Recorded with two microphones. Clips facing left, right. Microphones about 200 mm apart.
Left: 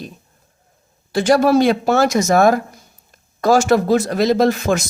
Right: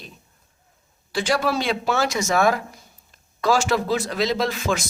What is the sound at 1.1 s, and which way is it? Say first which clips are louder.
Speech: left 9 dB; 45° left (ahead or behind).